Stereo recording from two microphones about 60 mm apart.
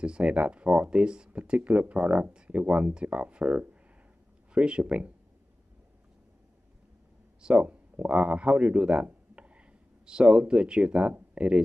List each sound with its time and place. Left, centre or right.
0.0 s speech: centre
7.4 s speech: right